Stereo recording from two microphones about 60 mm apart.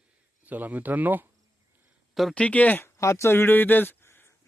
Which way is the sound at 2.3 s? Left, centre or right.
Left.